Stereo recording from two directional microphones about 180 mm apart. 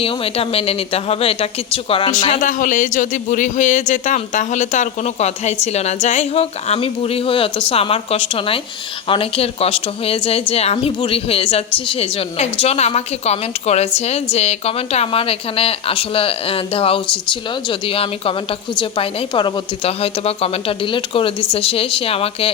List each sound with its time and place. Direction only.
0.0 s a woman's voice: 35° left (ahead or behind)
2.4 s a woman's voice: 45° left (ahead or behind)